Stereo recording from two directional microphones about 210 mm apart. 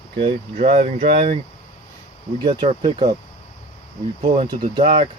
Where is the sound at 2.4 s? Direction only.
25° right (ahead or behind).